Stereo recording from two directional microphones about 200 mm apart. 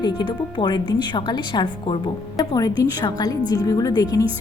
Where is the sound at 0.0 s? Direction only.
25° left (ahead or behind).